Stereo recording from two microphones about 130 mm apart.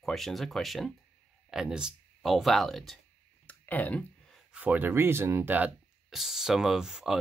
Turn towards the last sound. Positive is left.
turn(degrees=-5)  # may be behind; listen again after turning